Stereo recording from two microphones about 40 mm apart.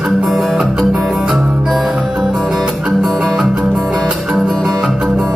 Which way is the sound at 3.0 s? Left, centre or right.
Centre.